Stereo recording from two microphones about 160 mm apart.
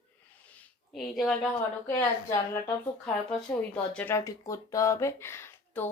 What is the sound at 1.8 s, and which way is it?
Speech, 15° left (ahead or behind).